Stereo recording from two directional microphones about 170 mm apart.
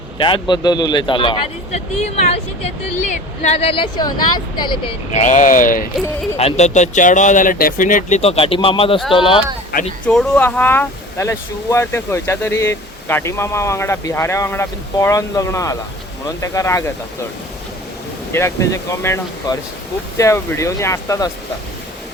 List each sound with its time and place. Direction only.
0.2 s speech: 30° left (ahead or behind)
5.1 s speech: 45° left (ahead or behind)
6.3 s speech: 40° left (ahead or behind)
8.2 s speech: 35° left (ahead or behind)
10.1 s speech: 5° left (ahead or behind)
18.3 s speech: 15° left (ahead or behind)